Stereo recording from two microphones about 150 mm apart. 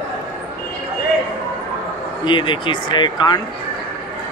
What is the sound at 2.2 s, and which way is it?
Speech, 30° left (ahead or behind).